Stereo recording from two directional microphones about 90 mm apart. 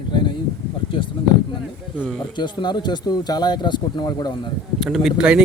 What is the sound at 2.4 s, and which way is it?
Speech, 55° left (ahead or behind).